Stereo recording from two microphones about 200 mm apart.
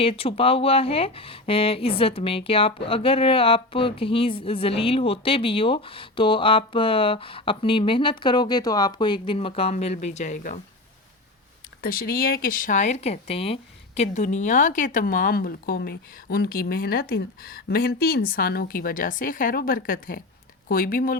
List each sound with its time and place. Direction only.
0.0 s speech: 30° left (ahead or behind)
11.8 s speech: 45° left (ahead or behind)